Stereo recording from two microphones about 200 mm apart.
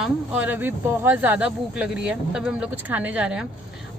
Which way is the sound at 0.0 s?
5° right (ahead or behind).